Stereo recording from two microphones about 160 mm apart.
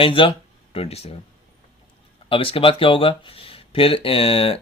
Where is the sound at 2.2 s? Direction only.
35° left (ahead or behind).